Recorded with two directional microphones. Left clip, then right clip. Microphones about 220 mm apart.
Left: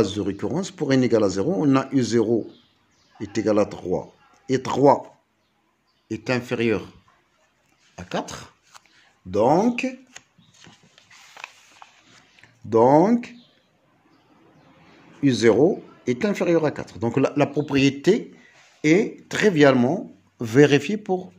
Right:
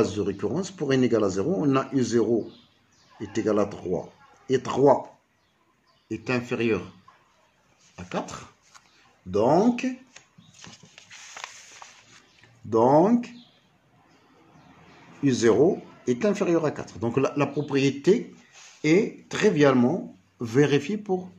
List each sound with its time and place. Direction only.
0.0 s speech: 40° left (ahead or behind)
6.0 s speech: 40° left (ahead or behind)
7.9 s speech: 40° left (ahead or behind)
10.1 s a sound: 25° left (ahead or behind)
10.6 s horse: 15° right (ahead or behind)
11.4 s horse: 25° right (ahead or behind)
12.4 s speech: 40° left (ahead or behind)
15.2 s speech: 35° left (ahead or behind)